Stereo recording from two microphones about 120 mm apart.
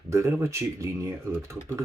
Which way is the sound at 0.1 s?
25° right (ahead or behind).